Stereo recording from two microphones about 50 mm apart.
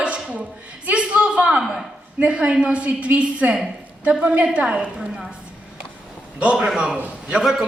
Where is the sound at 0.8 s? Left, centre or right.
Right.